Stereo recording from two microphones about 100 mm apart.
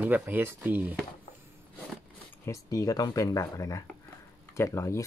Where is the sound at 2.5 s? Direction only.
35° left (ahead or behind).